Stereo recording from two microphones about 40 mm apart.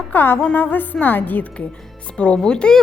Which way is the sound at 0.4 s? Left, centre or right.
Left.